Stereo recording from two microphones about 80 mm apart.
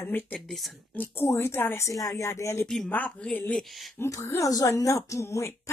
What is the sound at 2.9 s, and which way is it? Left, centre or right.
Speech, left.